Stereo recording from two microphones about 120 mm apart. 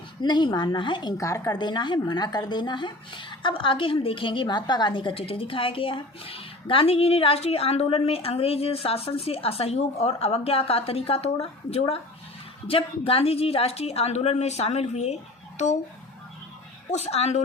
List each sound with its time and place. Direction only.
0.2 s speech: 40° left (ahead or behind)
1.1 s speech: 25° left (ahead or behind)
1.5 s a woman's voice: 40° left (ahead or behind); by 15.7 s 70° left (ahead or behind)
16.9 s a woman's voice: 60° left (ahead or behind)